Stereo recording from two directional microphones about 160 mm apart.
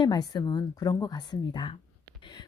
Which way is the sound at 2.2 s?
30° left (ahead or behind).